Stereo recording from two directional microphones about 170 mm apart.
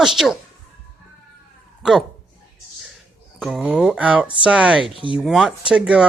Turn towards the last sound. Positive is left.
turn(degrees=-5)  # may be behind; listen again after turning